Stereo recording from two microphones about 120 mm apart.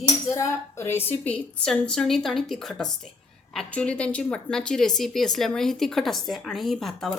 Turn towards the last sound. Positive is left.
turn(degrees=5)  # may be behind; listen again after turning